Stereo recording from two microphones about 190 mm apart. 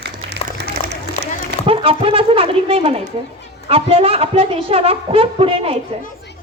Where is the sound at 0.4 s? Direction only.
35° left (ahead or behind).